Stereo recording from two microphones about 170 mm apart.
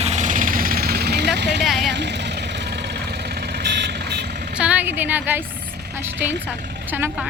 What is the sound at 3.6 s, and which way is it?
Vehicle, 90° right.